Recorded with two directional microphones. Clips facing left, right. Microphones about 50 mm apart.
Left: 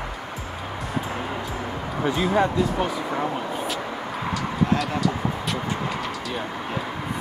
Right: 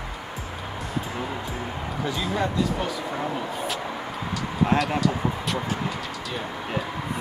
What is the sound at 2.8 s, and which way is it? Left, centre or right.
Speech, left.